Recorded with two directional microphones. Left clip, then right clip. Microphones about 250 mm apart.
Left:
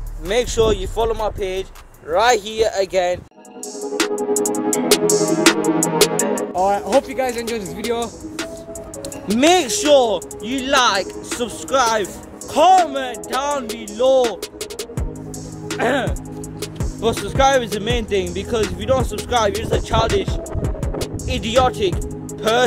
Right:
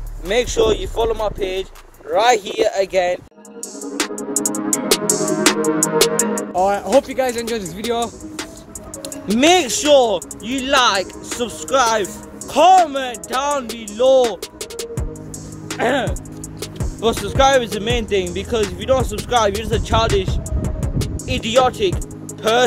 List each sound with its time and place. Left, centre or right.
0.3 s speech: centre
3.9 s music: centre
6.5 s speech: centre
9.3 s speech: centre
17.1 s speech: centre